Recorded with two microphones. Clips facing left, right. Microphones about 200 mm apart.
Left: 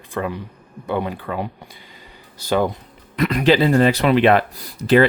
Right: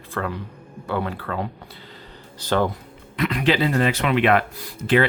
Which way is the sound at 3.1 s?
40° left (ahead or behind).